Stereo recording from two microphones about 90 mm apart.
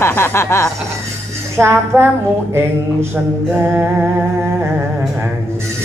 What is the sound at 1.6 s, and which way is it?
Speech, 30° right (ahead or behind).